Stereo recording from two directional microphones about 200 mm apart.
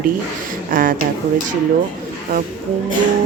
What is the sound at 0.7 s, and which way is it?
Speech, 45° right (ahead or behind).